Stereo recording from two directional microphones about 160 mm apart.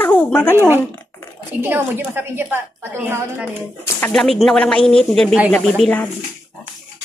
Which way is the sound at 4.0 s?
5° left (ahead or behind).